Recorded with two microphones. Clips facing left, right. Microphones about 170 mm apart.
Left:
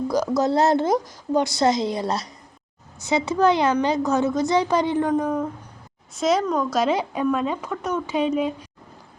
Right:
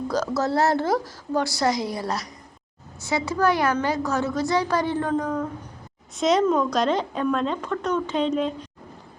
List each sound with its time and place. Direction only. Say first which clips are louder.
0.1 s a woman's voice: left 2 dB; 15° left (ahead or behind)
6.1 s speech: right 1 dB; centre (ahead or behind)